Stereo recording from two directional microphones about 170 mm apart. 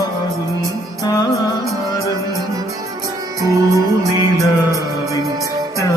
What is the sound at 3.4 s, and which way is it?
Music, 20° right (ahead or behind).